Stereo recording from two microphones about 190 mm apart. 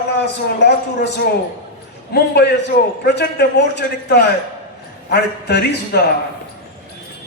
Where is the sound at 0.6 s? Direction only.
65° left (ahead or behind).